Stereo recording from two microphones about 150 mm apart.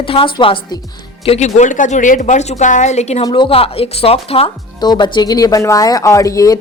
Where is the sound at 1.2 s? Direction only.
45° left (ahead or behind).